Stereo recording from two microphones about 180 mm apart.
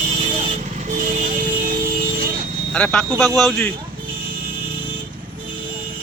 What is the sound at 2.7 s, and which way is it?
Speech, 5° left (ahead or behind).